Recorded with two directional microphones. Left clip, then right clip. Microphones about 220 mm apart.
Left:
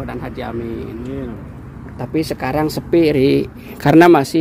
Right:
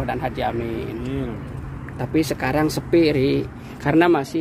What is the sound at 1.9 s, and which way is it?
Speech, 20° left (ahead or behind).